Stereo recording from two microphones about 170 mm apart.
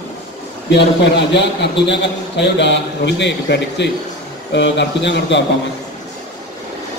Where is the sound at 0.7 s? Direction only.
85° left.